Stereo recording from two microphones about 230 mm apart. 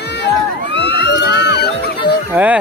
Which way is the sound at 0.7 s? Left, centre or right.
Left.